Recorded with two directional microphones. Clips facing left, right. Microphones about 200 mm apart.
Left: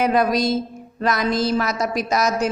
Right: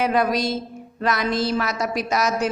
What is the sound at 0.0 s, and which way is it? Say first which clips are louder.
A woman's voice: left 2 dB; 40° left (ahead or behind).